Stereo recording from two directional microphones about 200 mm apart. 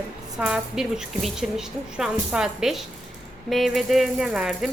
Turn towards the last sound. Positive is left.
turn(degrees=-5)  # may be behind; listen again after turning